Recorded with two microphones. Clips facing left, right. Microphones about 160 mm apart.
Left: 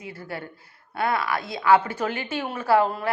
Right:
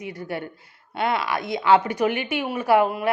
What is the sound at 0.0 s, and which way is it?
Speech, 20° right (ahead or behind).